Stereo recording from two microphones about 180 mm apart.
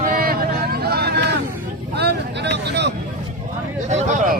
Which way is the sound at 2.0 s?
65° right (ahead or behind).